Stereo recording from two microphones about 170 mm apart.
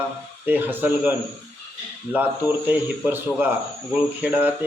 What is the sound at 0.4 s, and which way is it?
Speech, 10° right (ahead or behind).